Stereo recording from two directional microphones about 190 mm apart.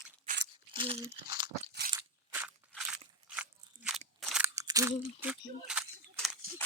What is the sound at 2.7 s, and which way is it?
Crunch, 5° right (ahead or behind).